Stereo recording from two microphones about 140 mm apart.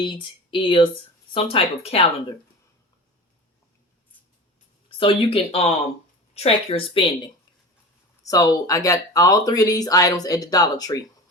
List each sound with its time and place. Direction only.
0.0 s speech: 35° left (ahead or behind)
4.9 s speech: 40° left (ahead or behind)
8.2 s speech: 25° left (ahead or behind)